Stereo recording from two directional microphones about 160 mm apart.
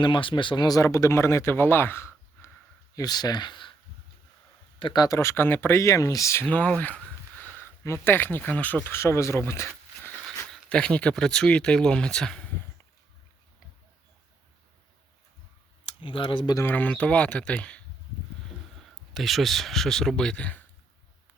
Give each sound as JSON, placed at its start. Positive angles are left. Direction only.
{"t": 0.0, "sound": "speech", "side_deg": 30}
{"t": 4.8, "sound": "speech", "side_deg": 25}
{"t": 10.5, "sound": "speech", "side_deg": 5}
{"t": 15.9, "sound": "speech", "side_deg": 35}
{"t": 16.6, "sound": "speech", "side_deg": 10}
{"t": 19.1, "sound": "speech", "side_deg": 0}